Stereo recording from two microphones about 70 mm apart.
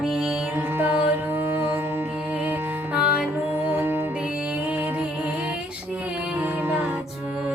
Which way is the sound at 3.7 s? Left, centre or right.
Right.